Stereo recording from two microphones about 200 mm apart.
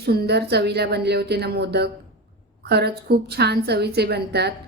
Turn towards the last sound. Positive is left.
turn(degrees=-55)  # may be behind; listen again after turning